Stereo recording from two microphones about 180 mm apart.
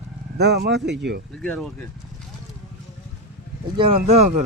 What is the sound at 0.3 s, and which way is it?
Speech, 65° right (ahead or behind).